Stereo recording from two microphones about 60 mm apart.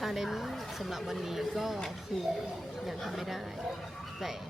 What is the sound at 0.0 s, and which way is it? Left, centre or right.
A woman's voice, centre.